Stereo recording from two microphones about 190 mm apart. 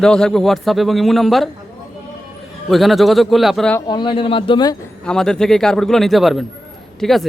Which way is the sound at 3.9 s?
25° left (ahead or behind).